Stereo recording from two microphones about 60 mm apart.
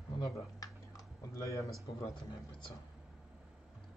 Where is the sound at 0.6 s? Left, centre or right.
Left.